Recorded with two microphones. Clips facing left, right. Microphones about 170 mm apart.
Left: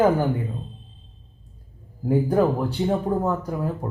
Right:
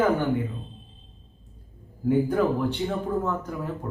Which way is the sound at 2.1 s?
35° left (ahead or behind).